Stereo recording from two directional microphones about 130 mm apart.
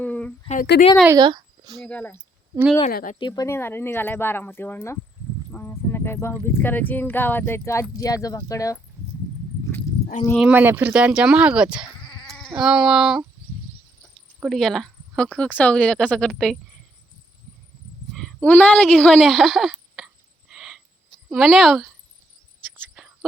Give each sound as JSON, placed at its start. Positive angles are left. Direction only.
{"t": 0.0, "sound": "a sound", "side_deg": 10}
{"t": 0.4, "sound": "a woman's voice", "side_deg": 70}
{"t": 1.1, "sound": "a sound", "side_deg": -35}
{"t": 1.8, "sound": "speech", "side_deg": 10}
{"t": 3.2, "sound": "speech", "side_deg": 35}
{"t": 3.4, "sound": "speech", "side_deg": 20}
{"t": 10.3, "sound": "speech", "side_deg": -10}
{"t": 14.4, "sound": "speech", "side_deg": 0}
{"t": 18.1, "sound": "a child's voice", "side_deg": 5}
{"t": 20.5, "sound": "owl", "side_deg": -5}
{"t": 21.2, "sound": "speech", "side_deg": 0}